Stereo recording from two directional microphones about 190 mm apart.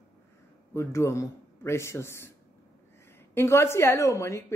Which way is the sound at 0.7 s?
15° left (ahead or behind).